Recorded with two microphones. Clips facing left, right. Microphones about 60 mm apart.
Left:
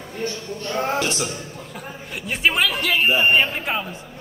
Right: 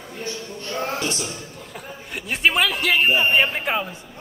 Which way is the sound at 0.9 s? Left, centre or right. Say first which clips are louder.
Left 3 dB; left.